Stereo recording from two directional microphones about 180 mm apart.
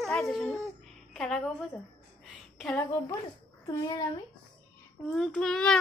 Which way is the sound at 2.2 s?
5° left (ahead or behind).